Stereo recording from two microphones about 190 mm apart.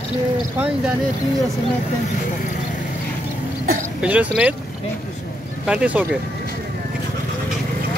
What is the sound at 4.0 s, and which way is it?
Speech, 5° right (ahead or behind).